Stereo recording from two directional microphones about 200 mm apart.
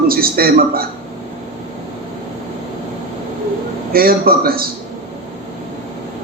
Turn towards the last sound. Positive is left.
turn(degrees=-50)  # may be behind; listen again after turning